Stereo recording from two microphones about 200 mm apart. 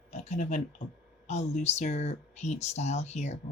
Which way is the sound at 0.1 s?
35° left (ahead or behind).